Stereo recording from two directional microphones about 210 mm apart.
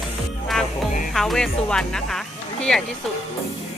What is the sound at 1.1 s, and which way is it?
Speech, centre (ahead or behind).